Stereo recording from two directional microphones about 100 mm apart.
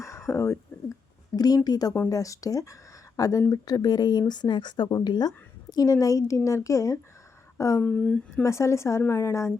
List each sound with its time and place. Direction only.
0.0 s a sound: 30° left (ahead or behind)
1.4 s a woman's voice: 40° left (ahead or behind)
7.8 s speech: 10° left (ahead or behind)
8.4 s speech: 30° left (ahead or behind)